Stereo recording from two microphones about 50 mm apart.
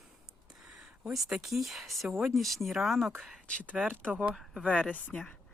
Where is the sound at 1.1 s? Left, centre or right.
Centre.